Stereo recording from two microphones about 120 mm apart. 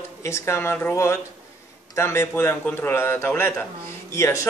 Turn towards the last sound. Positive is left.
turn(degrees=25)  # may be behind; listen again after turning